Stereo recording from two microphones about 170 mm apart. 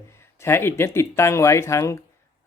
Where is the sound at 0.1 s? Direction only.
15° left (ahead or behind).